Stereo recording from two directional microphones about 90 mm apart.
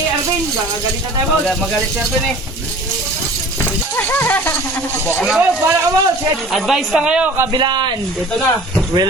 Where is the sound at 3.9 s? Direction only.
20° left (ahead or behind).